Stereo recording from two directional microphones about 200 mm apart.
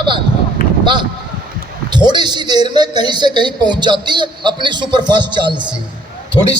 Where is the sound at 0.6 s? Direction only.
45° left (ahead or behind).